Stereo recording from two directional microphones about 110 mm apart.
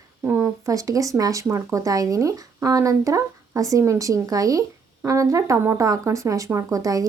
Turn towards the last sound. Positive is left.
turn(degrees=-30)  # may be behind; listen again after turning